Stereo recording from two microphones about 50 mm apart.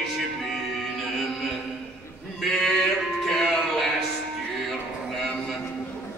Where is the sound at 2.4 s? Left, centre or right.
Centre.